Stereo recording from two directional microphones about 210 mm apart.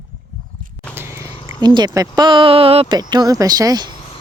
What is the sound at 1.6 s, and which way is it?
Speech, 20° right (ahead or behind).